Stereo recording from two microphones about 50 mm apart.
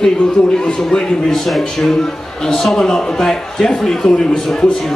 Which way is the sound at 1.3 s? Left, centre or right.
Centre.